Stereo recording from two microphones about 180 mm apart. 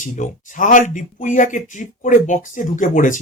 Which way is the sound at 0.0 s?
45° left (ahead or behind).